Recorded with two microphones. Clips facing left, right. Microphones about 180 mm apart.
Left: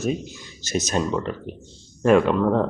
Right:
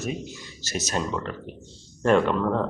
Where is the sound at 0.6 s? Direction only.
20° left (ahead or behind).